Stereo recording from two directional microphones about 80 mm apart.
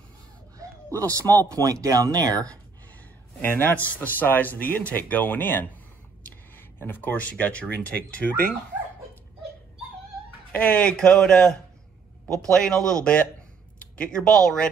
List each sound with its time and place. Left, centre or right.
0.9 s speech: right
3.3 s speech: left
10.5 s speech: centre